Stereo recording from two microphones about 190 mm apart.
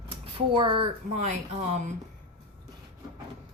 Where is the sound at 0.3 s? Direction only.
25° right (ahead or behind).